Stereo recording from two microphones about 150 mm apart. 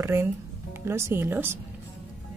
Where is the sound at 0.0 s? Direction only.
20° right (ahead or behind).